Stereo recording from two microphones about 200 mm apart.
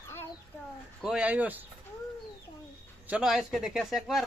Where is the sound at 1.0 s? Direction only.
5° right (ahead or behind).